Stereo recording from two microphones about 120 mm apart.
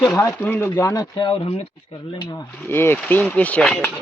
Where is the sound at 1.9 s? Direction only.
40° left (ahead or behind).